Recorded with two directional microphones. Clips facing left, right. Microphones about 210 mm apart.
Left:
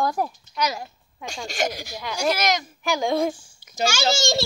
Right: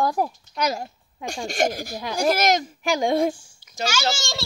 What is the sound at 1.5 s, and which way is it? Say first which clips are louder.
Speech: right 3 dB; 50° right (ahead or behind).